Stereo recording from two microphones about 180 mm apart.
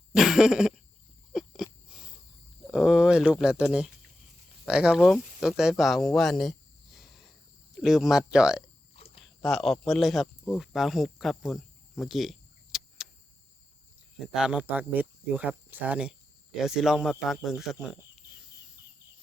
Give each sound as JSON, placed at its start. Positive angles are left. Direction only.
{"t": 0.1, "sound": "cough", "side_deg": 0}
{"t": 1.3, "sound": "wheeze", "side_deg": 0}
{"t": 2.7, "sound": "speech", "side_deg": -5}
{"t": 9.0, "sound": "a sound", "side_deg": 35}
{"t": 9.4, "sound": "speech", "side_deg": 0}
{"t": 14.3, "sound": "speech", "side_deg": -5}